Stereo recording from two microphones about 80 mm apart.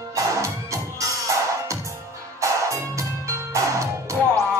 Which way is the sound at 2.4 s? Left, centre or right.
Right.